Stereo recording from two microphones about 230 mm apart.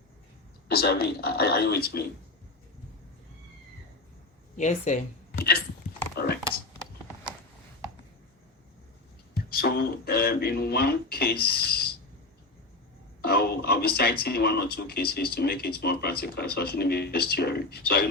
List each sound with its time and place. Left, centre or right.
0.7 s speech: left
4.5 s speech: left
9.5 s speech: left
13.2 s speech: left